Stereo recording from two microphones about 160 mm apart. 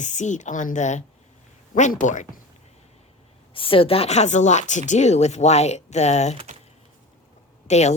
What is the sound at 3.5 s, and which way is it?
A woman's voice, 35° left (ahead or behind).